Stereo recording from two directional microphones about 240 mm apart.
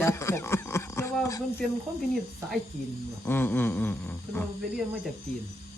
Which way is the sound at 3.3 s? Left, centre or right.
Centre.